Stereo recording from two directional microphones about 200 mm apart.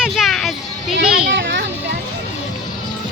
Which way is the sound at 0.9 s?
60° right (ahead or behind).